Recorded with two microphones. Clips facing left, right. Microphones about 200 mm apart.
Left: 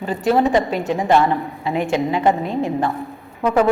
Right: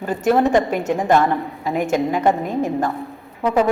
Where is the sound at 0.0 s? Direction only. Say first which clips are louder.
Even; 50° right (ahead or behind).